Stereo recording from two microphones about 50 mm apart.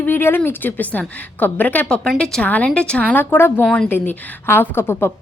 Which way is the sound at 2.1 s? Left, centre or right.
Centre.